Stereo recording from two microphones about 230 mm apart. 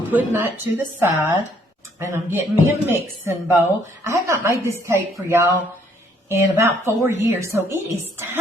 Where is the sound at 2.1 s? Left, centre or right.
Centre.